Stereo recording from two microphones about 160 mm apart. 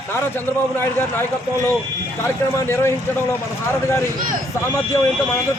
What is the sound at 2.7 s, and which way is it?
Speech, 15° left (ahead or behind).